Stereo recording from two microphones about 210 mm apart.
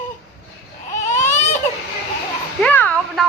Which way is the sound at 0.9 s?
35° left (ahead or behind).